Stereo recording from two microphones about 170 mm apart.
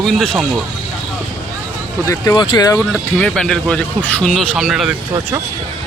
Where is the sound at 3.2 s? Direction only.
5° left (ahead or behind).